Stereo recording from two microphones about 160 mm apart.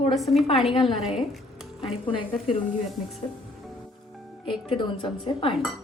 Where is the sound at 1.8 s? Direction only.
35° left (ahead or behind).